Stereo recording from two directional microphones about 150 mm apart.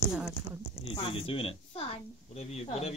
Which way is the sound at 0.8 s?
40° left (ahead or behind).